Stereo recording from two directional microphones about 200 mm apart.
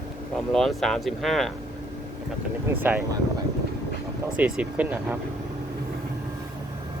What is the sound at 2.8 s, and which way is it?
Speech, 10° right (ahead or behind).